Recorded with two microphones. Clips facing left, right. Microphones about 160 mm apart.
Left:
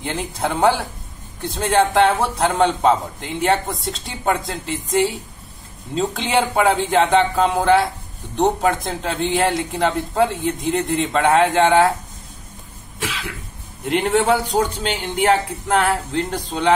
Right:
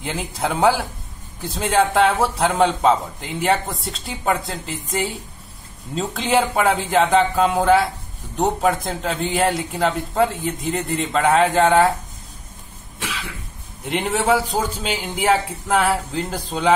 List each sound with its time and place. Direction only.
0.0 s a man's voice: centre (ahead or behind)
13.8 s a man's voice: centre (ahead or behind)